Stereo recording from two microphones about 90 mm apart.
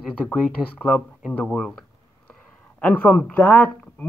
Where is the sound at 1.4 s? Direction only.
5° left (ahead or behind).